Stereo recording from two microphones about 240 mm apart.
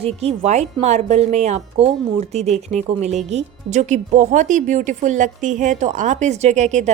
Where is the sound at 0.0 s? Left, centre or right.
Right.